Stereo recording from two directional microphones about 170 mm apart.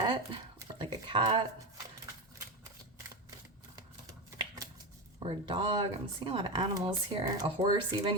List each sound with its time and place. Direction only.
0.8 s speech: 30° right (ahead or behind)
5.2 s speech: 30° right (ahead or behind)